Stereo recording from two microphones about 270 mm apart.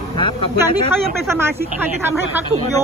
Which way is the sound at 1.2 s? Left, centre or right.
Centre.